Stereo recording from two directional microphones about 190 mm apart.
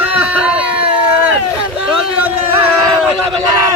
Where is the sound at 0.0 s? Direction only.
5° right (ahead or behind).